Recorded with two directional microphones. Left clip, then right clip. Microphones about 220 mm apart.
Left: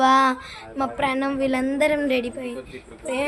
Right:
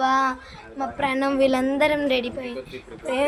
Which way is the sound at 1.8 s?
10° left (ahead or behind).